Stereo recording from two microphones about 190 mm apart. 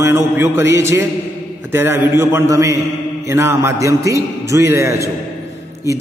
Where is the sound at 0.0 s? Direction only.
15° right (ahead or behind).